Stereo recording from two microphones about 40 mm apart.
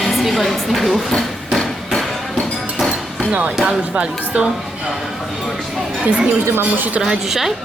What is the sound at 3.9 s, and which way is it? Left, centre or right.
Speech, right.